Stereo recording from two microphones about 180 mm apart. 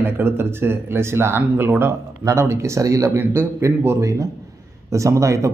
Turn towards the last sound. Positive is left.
turn(degrees=-15)  # may be behind; listen again after turning